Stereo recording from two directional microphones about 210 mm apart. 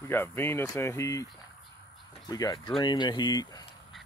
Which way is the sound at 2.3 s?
20° left (ahead or behind).